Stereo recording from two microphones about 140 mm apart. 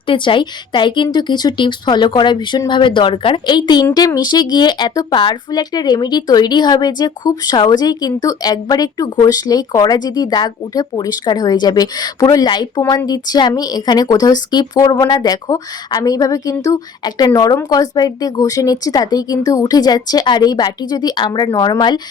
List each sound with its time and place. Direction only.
0.1 s a woman's voice: 35° left (ahead or behind)